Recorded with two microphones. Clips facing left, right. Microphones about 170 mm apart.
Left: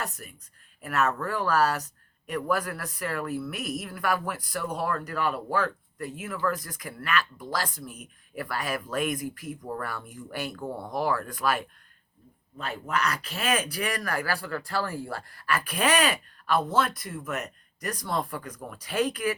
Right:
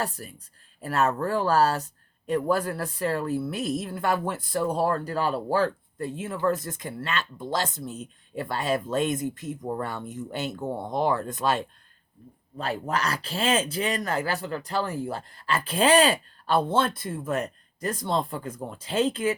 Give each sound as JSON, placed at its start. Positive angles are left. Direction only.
{"t": 0.0, "sound": "speech", "side_deg": -30}
{"t": 12.5, "sound": "speech", "side_deg": -35}